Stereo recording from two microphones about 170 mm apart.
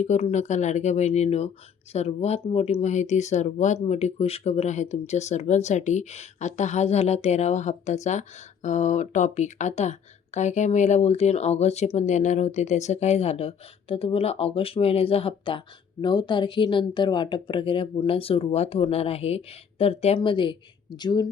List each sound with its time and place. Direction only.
0.0 s speech: 40° left (ahead or behind); by 21.2 s 25° left (ahead or behind)